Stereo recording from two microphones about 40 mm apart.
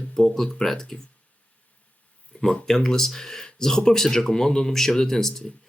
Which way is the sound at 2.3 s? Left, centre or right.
Left.